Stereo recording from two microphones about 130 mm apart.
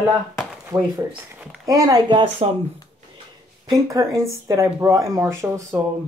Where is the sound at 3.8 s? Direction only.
25° right (ahead or behind).